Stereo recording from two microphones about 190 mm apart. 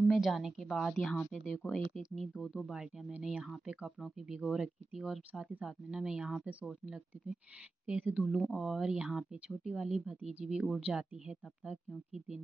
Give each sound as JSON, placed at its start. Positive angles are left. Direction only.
{"t": 0.1, "sound": "speech", "side_deg": 0}